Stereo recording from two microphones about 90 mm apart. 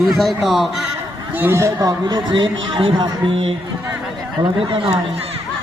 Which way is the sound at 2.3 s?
65° right (ahead or behind).